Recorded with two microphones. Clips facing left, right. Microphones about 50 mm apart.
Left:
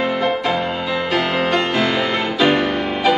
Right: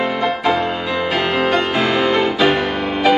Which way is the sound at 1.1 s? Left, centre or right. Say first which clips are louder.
Right 1 dB; centre.